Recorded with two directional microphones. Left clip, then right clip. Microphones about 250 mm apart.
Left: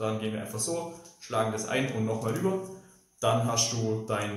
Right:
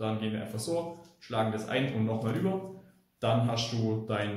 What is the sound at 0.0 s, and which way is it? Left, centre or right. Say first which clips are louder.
A man's voice: left 2 dB; centre.